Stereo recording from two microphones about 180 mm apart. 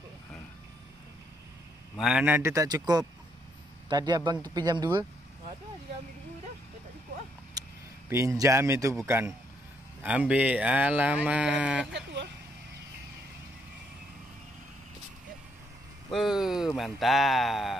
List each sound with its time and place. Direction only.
2.0 s speech: 5° right (ahead or behind); by 5.0 s 25° right (ahead or behind)
8.1 s speech: 15° right (ahead or behind)
11.9 s vehicle: 75° right (ahead or behind)
16.1 s speech: centre (ahead or behind)